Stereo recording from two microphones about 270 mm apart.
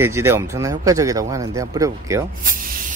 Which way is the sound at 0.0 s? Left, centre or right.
Centre.